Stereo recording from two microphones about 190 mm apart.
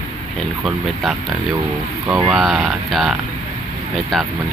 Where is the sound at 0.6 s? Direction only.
Centre (ahead or behind).